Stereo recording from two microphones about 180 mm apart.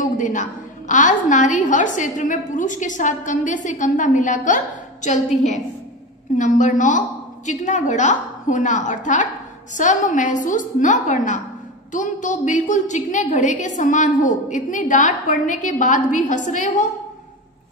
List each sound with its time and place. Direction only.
0.0 s a woman's voice: 45° left (ahead or behind)